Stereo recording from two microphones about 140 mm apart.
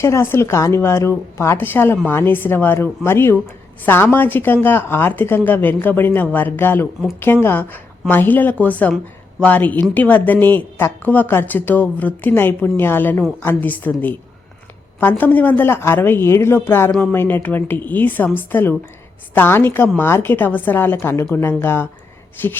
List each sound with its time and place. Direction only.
0.0 s a woman's voice: 20° left (ahead or behind)
15.2 s a woman's voice: 10° left (ahead or behind)